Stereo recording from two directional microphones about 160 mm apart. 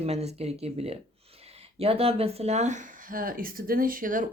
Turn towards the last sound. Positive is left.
turn(degrees=-55)  # may be behind; listen again after turning